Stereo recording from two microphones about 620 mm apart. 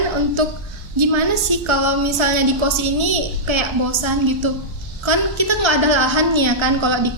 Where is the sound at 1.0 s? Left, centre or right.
Right.